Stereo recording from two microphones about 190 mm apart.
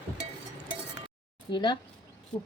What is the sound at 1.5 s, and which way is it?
Cutlery, 25° left (ahead or behind).